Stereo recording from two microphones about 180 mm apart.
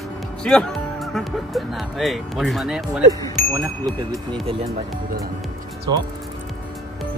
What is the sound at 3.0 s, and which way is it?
Speech, 20° right (ahead or behind).